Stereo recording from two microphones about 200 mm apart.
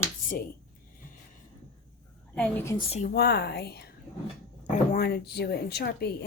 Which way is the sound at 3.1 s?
55° left (ahead or behind).